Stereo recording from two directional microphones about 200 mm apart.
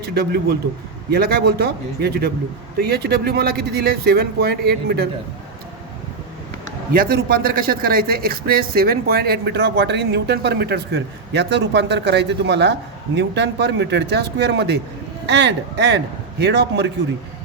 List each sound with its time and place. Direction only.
0.0 s a man's voice: 55° right (ahead or behind)
6.9 s a man's voice: 50° right (ahead or behind)